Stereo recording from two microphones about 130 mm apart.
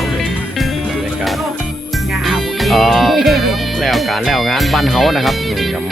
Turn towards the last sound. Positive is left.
turn(degrees=0)  # may be behind; listen again after turning